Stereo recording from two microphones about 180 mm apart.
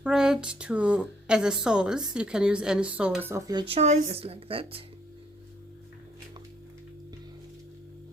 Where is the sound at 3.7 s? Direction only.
35° right (ahead or behind).